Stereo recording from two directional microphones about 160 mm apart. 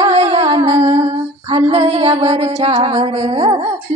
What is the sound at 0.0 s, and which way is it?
Music, 40° right (ahead or behind).